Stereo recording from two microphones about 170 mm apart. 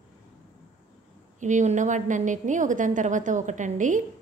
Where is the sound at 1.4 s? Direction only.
45° right (ahead or behind).